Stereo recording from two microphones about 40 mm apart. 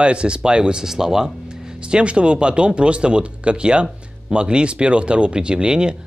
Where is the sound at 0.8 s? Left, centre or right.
Centre.